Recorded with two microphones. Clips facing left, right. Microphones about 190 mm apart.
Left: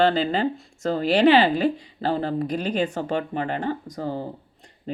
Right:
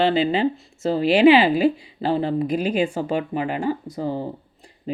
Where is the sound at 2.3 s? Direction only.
10° right (ahead or behind).